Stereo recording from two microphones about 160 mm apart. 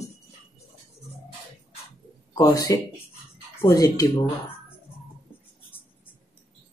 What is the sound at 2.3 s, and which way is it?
Speech, 20° left (ahead or behind).